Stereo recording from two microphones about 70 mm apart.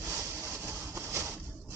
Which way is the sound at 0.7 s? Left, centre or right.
Right.